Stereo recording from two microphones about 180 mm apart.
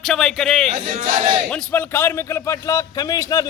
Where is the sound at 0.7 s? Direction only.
35° right (ahead or behind).